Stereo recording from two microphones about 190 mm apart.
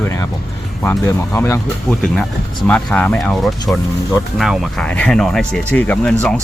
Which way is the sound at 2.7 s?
5° left (ahead or behind).